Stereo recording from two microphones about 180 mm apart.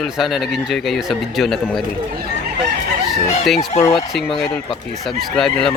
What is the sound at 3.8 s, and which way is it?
Speech, 20° left (ahead or behind).